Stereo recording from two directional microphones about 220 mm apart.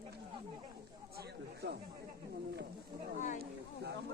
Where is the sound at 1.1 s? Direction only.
45° right (ahead or behind).